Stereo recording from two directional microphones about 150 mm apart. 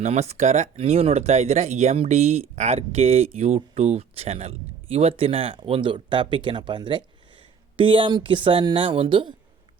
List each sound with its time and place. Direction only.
0.0 s speech: 45° right (ahead or behind)